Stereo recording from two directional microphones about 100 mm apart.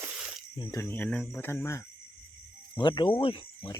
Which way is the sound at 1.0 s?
5° left (ahead or behind).